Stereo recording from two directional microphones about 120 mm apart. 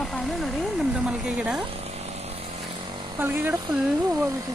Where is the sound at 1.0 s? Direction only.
5° right (ahead or behind).